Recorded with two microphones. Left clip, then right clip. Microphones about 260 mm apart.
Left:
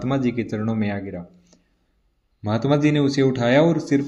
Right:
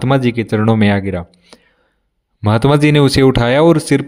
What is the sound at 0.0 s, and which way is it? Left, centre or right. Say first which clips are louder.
Speech: right 9 dB; right.